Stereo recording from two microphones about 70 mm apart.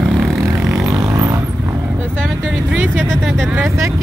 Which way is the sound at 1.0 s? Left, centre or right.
Right.